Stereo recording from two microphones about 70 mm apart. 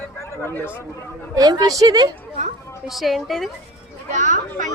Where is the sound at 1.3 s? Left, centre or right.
Right.